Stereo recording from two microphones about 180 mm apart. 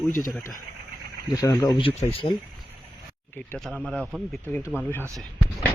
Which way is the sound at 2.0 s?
30° left (ahead or behind).